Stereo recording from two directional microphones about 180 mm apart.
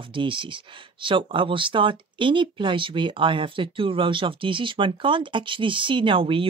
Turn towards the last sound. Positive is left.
turn(degrees=-30)  # may be behind; listen again after turning